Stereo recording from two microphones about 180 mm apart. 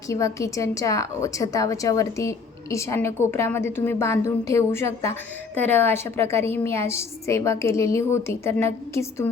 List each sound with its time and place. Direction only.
0.1 s a woman's voice: 15° left (ahead or behind)